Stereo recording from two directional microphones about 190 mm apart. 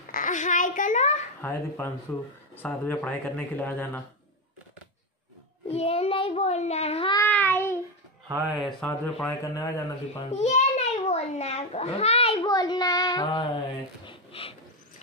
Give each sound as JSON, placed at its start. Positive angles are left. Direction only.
{"t": 0.1, "sound": "a child's voice", "side_deg": 40}
{"t": 1.4, "sound": "speech", "side_deg": 15}
{"t": 5.7, "sound": "a child's voice", "side_deg": 30}
{"t": 7.2, "sound": "speech", "side_deg": 10}
{"t": 8.3, "sound": "speech", "side_deg": -5}
{"t": 8.8, "sound": "speech", "side_deg": 10}
{"t": 10.1, "sound": "a child's voice", "side_deg": 30}
{"t": 12.4, "sound": "speech", "side_deg": 20}
{"t": 14.0, "sound": "a sound", "side_deg": 30}